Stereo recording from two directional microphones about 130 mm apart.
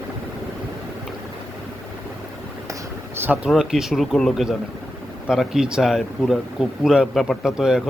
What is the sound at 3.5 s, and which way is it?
Speech, centre (ahead or behind).